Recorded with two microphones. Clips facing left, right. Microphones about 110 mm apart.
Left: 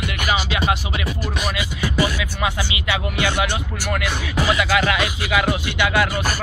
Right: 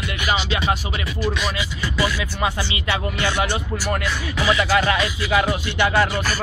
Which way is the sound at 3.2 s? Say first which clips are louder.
Left 1 dB; 35° right (ahead or behind).